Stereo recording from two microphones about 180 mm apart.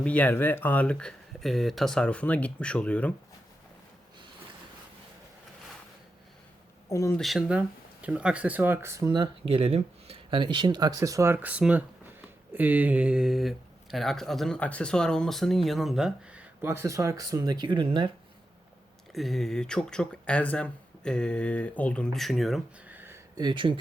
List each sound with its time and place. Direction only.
0.0 s speech: 10° left (ahead or behind)
6.8 s speech: 15° left (ahead or behind)
7.2 s speech: centre (ahead or behind); by 18.1 s 25° right (ahead or behind)
19.1 s speech: centre (ahead or behind)
23.4 s speech: 25° right (ahead or behind)